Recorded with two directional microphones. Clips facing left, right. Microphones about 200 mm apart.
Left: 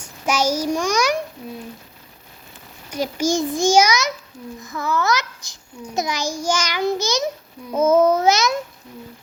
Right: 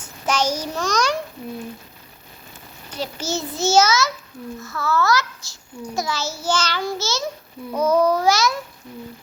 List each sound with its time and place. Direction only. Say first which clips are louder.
0.0 s a child's voice: left 1 dB; 10° left (ahead or behind)
2.9 s a child's voice: left 6 dB; 10° left (ahead or behind)